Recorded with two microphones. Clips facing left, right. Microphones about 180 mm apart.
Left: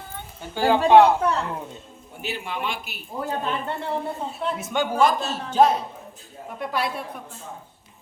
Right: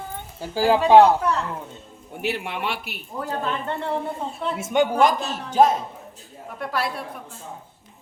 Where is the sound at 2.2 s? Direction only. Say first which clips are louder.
Right 3 dB; 70° right (ahead or behind).